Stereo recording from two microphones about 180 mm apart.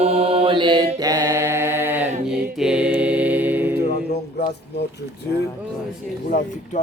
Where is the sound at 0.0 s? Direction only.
35° right (ahead or behind); by 2.0 s 10° right (ahead or behind).